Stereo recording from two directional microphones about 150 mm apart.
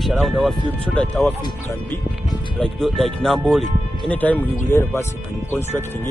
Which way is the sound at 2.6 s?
Centre (ahead or behind).